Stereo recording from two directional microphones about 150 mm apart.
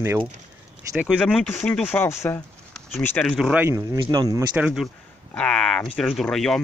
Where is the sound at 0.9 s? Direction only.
5° right (ahead or behind); by 2.4 s 15° left (ahead or behind).